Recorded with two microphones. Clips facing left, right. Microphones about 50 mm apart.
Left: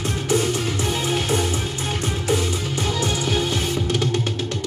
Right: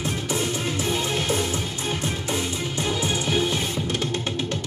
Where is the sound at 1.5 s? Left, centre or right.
Left.